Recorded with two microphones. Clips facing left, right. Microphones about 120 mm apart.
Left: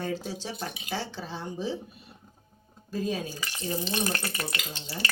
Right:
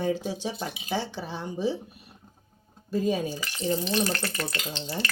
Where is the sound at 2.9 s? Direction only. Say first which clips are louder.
Right 5 dB; 15° right (ahead or behind).